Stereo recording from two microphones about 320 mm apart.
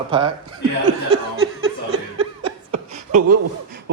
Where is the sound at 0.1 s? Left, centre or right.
Centre.